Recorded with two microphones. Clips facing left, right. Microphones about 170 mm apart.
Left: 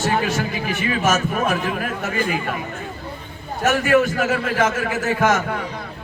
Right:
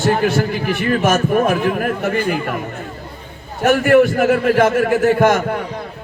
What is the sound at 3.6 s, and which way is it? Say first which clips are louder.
A man's voice: right 5 dB; 55° right (ahead or behind).